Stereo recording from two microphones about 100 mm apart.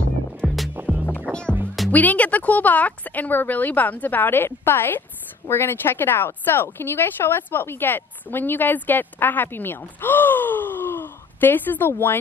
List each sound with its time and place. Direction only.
0.4 s music: centre (ahead or behind)
1.0 s music: 15° left (ahead or behind)
1.9 s a woman's voice: 15° left (ahead or behind)